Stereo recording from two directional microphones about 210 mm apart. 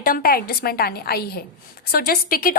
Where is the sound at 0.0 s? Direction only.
45° left (ahead or behind).